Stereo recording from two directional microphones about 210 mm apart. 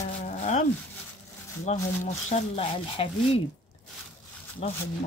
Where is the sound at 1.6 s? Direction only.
30° left (ahead or behind).